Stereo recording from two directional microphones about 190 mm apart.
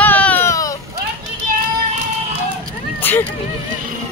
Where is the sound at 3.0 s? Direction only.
10° left (ahead or behind).